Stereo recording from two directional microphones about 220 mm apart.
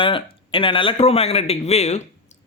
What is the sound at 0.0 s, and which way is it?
A man's voice, 25° left (ahead or behind).